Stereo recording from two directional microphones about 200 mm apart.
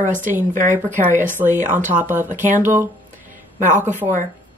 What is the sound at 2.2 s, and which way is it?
Speech, 40° right (ahead or behind).